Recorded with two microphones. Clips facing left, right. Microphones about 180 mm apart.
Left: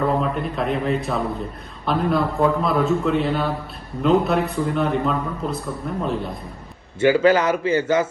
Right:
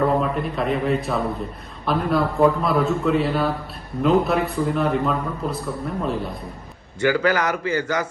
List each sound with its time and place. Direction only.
0.0 s a man's voice: centre (ahead or behind)
7.0 s speech: 25° left (ahead or behind)